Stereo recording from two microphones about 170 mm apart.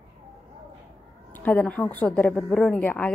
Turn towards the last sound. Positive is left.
turn(degrees=10)  # may be behind; listen again after turning